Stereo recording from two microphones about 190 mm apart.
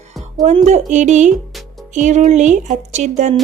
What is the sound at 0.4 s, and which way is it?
Speech, 35° right (ahead or behind).